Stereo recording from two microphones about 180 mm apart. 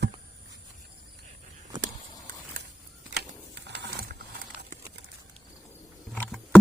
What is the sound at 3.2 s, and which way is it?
Sewing machine, 70° right (ahead or behind).